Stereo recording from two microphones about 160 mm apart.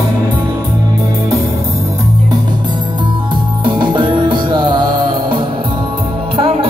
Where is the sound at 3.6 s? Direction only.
30° right (ahead or behind).